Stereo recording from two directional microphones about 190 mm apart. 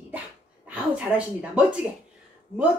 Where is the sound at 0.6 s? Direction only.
5° right (ahead or behind).